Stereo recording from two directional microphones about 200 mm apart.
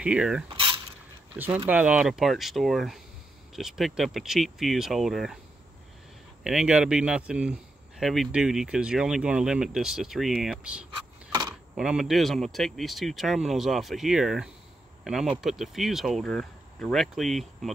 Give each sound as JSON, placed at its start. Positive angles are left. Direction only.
{"t": 0.0, "sound": "speech", "side_deg": -5}
{"t": 0.5, "sound": "mechanisms", "side_deg": -25}
{"t": 1.7, "sound": "speech", "side_deg": -5}
{"t": 6.4, "sound": "speech", "side_deg": -5}